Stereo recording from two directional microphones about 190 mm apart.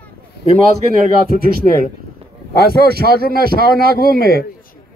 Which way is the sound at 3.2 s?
50° left (ahead or behind).